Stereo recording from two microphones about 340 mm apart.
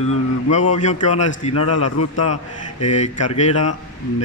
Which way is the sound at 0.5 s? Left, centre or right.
Left.